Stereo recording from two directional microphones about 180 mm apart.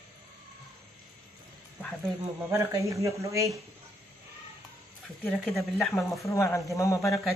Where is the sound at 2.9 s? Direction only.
15° right (ahead or behind).